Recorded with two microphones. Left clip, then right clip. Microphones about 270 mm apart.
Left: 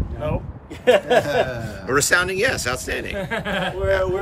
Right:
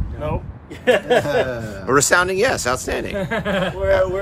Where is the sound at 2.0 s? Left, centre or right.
Centre.